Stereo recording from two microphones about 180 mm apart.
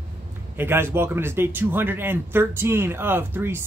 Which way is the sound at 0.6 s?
15° right (ahead or behind).